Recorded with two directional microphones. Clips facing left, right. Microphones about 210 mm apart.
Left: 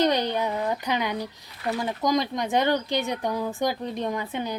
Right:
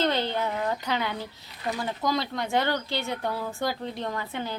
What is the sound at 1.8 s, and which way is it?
Speech, 15° left (ahead or behind).